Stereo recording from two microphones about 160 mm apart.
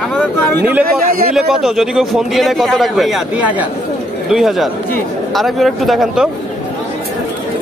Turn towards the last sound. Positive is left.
turn(degrees=0)  # may be behind; listen again after turning